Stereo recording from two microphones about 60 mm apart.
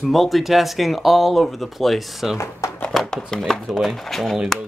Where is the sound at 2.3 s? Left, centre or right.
Left.